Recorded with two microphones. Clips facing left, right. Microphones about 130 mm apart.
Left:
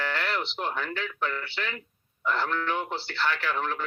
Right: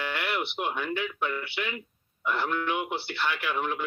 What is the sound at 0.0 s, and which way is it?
A man's voice, 15° right (ahead or behind).